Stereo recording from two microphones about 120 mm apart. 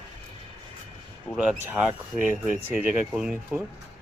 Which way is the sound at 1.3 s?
5° right (ahead or behind).